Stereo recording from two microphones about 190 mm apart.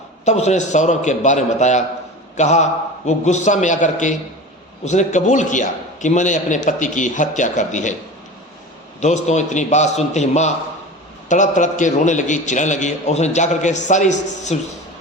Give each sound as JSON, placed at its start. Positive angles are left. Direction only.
{"t": 0.3, "sound": "a man's voice", "side_deg": 35}
{"t": 9.0, "sound": "a man's voice", "side_deg": 40}